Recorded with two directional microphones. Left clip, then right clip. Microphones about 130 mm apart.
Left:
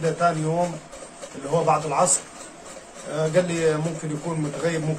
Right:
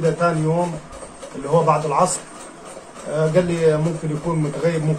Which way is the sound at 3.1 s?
15° left (ahead or behind).